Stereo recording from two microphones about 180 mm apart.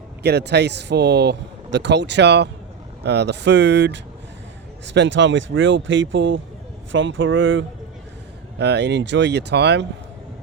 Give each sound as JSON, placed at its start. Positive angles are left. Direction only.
{"t": 0.2, "sound": "speech", "side_deg": -65}
{"t": 4.9, "sound": "speech", "side_deg": -90}
{"t": 8.5, "sound": "speech", "side_deg": -70}